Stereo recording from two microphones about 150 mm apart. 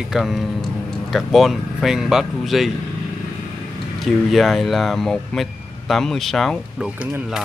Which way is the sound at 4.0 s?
Centre (ahead or behind).